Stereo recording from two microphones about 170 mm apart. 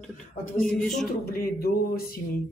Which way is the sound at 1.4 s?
60° left (ahead or behind).